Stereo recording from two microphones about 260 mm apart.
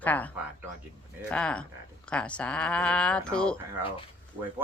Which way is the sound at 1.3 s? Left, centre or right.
Centre.